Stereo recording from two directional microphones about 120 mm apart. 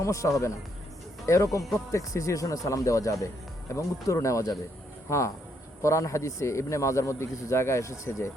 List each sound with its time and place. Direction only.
0.0 s a man's voice: 25° left (ahead or behind)